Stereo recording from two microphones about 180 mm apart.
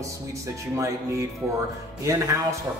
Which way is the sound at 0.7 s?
15° right (ahead or behind).